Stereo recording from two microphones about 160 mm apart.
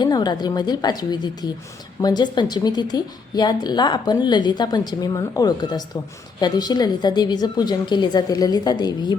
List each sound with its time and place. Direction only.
0.0 s speech: 25° left (ahead or behind)